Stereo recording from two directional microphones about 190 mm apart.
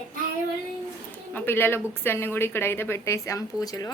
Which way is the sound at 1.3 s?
10° left (ahead or behind).